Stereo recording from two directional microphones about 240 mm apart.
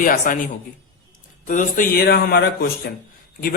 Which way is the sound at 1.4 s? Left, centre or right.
Left.